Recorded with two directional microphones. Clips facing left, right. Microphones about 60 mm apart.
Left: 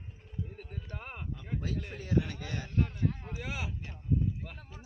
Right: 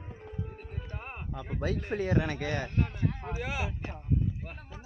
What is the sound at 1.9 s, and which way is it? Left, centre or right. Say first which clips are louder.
A man's voice: right 3 dB; right.